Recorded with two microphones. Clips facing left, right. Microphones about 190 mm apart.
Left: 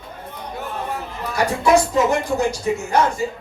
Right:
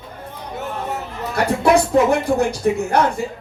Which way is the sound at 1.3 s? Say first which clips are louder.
Right 1 dB; 60° right (ahead or behind).